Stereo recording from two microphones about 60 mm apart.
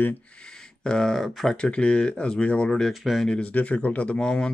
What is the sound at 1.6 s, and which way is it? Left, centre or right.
Speech, centre.